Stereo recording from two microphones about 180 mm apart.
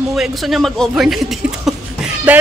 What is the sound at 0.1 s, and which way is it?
Speech, centre (ahead or behind).